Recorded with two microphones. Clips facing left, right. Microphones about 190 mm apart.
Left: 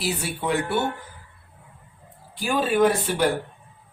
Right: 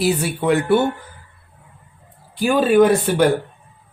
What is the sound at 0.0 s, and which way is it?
Speech, 60° right (ahead or behind).